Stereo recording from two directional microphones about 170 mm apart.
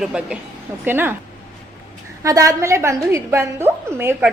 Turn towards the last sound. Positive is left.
turn(degrees=-15)  # may be behind; listen again after turning